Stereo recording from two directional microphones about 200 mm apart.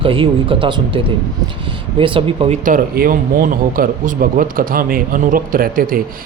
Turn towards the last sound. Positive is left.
turn(degrees=-45)  # may be behind; listen again after turning